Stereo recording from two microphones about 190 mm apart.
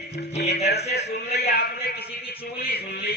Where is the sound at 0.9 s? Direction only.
55° left (ahead or behind).